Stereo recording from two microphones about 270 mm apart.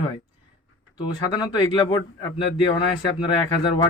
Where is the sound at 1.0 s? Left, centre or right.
Centre.